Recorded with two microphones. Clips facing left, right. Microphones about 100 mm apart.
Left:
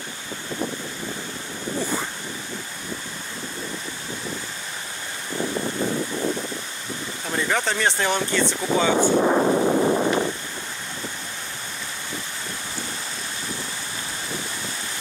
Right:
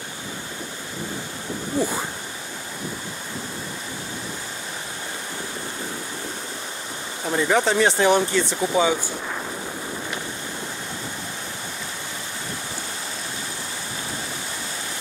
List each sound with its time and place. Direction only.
7.2 s speech: 10° right (ahead or behind)
8.9 s boat: 50° left (ahead or behind); by 10.1 s 70° left (ahead or behind)